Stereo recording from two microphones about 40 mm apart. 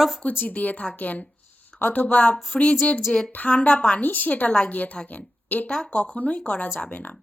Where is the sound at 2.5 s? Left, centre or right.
Centre.